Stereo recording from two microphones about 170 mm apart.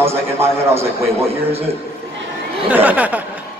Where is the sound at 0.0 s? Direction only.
15° right (ahead or behind).